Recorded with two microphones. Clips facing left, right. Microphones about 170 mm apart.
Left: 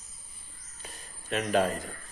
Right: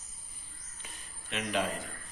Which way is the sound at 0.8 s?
40° left (ahead or behind).